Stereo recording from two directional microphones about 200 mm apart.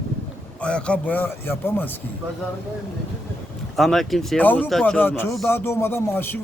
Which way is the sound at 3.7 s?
Centre (ahead or behind).